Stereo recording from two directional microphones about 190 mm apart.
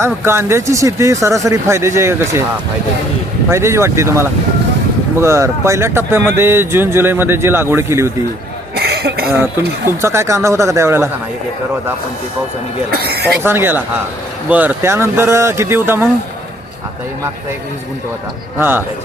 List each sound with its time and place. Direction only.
0.0 s speech: 15° right (ahead or behind)
3.5 s speech: 15° right (ahead or behind)
8.7 s cough: 55° right (ahead or behind)
9.3 s speech: 15° right (ahead or behind)
12.9 s speech: 55° right (ahead or behind)
13.4 s speech: 10° right (ahead or behind)
18.6 s speech: 10° right (ahead or behind)